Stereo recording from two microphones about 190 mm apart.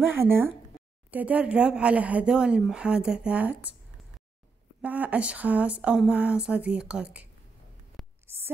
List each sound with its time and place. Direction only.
0.0 s speech: 10° right (ahead or behind)
4.8 s speech: 10° right (ahead or behind)
8.0 s hum: centre (ahead or behind)